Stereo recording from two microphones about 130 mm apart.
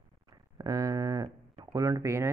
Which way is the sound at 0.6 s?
30° right (ahead or behind).